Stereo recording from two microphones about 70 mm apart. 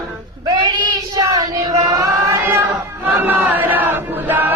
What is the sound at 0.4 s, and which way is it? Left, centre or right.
Child singing, right.